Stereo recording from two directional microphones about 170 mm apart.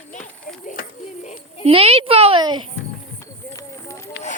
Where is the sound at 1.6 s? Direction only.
35° right (ahead or behind).